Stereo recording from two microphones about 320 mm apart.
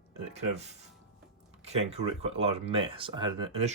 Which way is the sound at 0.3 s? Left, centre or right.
Right.